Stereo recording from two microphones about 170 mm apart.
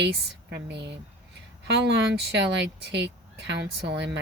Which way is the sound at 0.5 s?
90° right.